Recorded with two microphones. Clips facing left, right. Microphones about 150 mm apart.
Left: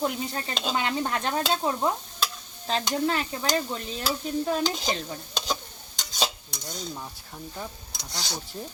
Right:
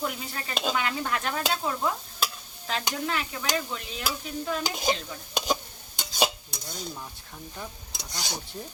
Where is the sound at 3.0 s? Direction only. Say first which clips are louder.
Left 4 dB; 35° left (ahead or behind).